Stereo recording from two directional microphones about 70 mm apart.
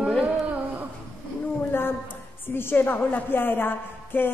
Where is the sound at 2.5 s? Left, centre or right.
Left.